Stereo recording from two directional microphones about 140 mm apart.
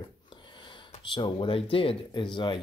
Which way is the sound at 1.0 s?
35° left (ahead or behind).